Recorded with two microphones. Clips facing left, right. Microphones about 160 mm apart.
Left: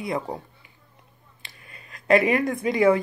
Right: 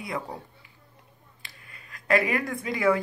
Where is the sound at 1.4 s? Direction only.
20° left (ahead or behind).